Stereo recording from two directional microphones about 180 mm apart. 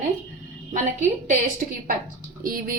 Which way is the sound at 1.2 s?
45° right (ahead or behind).